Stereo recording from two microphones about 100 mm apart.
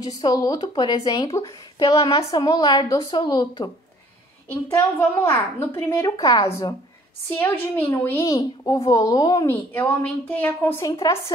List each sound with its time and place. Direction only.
0.0 s speech: 40° left (ahead or behind)
4.5 s a woman's voice: 25° left (ahead or behind)
6.0 s speech: 40° left (ahead or behind)
7.2 s a woman's voice: 20° left (ahead or behind)
8.4 s speech: 40° left (ahead or behind)
9.5 s a woman's voice: 30° left (ahead or behind)
10.0 s a woman's voice: 15° left (ahead or behind)
10.8 s speech: 35° left (ahead or behind)